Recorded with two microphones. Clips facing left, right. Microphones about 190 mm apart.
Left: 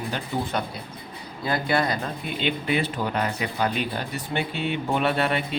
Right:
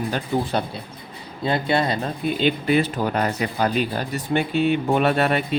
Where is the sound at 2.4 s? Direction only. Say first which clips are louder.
Right 5 dB; 40° right (ahead or behind).